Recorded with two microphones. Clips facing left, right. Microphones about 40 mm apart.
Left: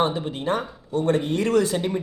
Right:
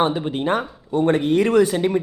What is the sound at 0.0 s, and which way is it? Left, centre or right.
Speech, right.